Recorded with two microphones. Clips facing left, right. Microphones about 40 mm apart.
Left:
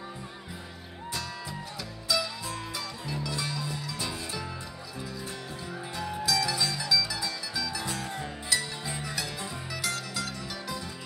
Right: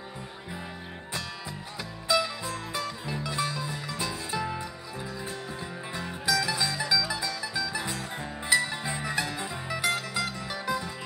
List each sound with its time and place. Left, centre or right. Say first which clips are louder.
2.0 s music: right 4 dB; right
5.9 s music: right 1 dB; right